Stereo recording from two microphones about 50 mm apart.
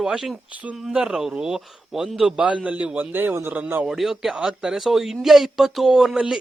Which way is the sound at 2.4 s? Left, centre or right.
Right.